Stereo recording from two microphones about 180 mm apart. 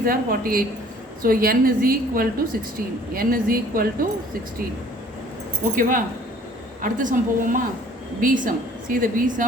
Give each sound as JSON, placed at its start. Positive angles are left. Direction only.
{"t": 0.0, "sound": "a woman's voice", "side_deg": -55}
{"t": 5.7, "sound": "a woman's voice", "side_deg": -50}